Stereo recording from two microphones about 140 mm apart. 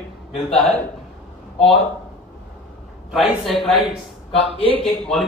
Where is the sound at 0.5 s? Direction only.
10° left (ahead or behind).